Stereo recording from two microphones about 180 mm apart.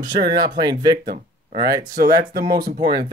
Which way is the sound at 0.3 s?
20° right (ahead or behind).